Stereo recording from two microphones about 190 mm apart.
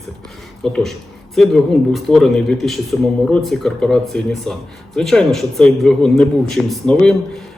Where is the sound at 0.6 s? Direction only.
Centre (ahead or behind).